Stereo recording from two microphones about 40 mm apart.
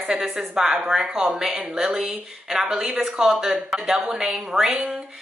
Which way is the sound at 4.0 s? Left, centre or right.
Centre.